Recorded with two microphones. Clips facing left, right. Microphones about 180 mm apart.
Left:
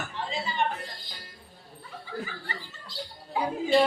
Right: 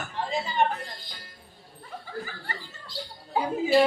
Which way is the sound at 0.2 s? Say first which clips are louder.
Right 4 dB; 45° right (ahead or behind).